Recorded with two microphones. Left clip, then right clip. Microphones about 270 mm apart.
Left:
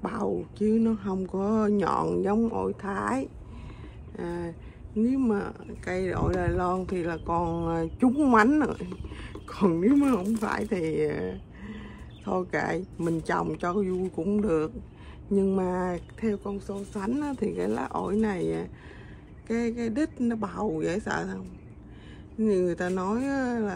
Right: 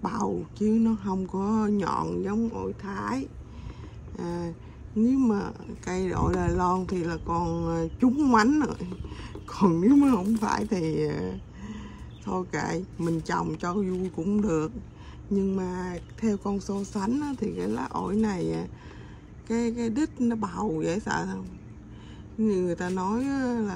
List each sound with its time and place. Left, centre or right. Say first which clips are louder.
0.0 s speech: even; centre
16.3 s speech: right 2 dB; centre
17.0 s speech: left 1 dB; centre
22.4 s speech: left 2 dB; centre